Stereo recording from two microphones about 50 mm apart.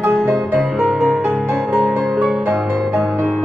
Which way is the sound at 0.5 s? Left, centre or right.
Centre.